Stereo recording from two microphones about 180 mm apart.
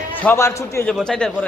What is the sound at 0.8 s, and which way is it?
Speech, 5° left (ahead or behind).